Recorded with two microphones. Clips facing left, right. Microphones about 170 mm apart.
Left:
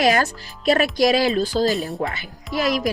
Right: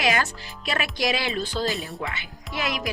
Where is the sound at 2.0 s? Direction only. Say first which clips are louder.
Left 6 dB; 40° left (ahead or behind).